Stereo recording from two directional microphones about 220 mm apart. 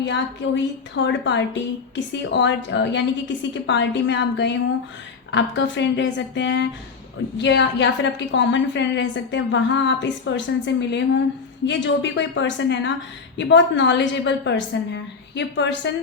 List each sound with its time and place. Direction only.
0.0 s a woman's voice: 55° left (ahead or behind)